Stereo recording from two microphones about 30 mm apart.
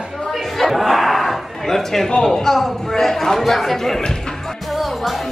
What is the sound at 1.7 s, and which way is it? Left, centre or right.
A man's voice, centre.